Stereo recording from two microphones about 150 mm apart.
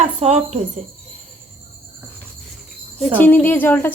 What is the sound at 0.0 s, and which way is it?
Speech, 50° right (ahead or behind).